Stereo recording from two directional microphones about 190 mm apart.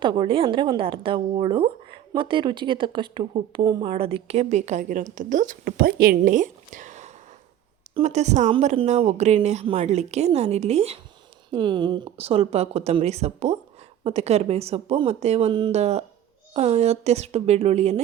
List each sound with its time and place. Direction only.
0.0 s a woman's voice: 25° right (ahead or behind)